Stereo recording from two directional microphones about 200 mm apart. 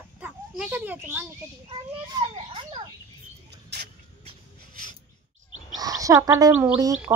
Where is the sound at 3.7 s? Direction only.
55° right (ahead or behind).